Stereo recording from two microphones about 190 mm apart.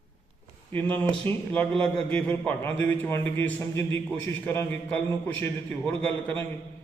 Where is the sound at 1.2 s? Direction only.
10° left (ahead or behind).